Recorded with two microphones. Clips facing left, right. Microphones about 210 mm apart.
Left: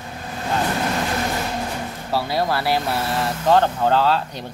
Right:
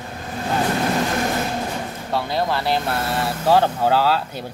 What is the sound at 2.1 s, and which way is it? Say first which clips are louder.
Speech: left 1 dB; 5° left (ahead or behind).